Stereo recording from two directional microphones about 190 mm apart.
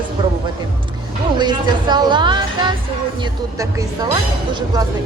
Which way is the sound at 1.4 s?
25° right (ahead or behind).